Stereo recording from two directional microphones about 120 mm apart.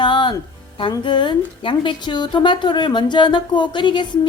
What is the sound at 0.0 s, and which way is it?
Music, 40° left (ahead or behind).